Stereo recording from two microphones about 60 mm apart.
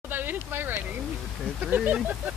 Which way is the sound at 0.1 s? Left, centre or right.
Right.